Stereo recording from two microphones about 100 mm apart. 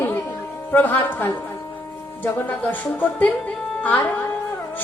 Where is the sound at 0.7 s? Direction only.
20° left (ahead or behind).